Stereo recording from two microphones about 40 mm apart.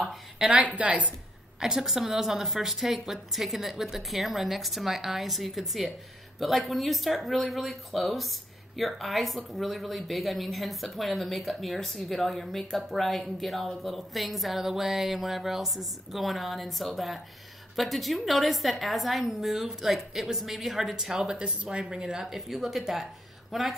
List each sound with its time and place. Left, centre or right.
0.5 s a woman's voice: right
1.6 s a woman's voice: centre
22.2 s speech: centre